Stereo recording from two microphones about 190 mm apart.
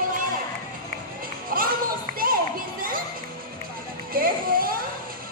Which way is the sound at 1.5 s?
50° right (ahead or behind).